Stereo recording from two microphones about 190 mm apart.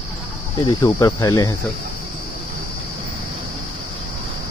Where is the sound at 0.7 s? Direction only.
20° left (ahead or behind).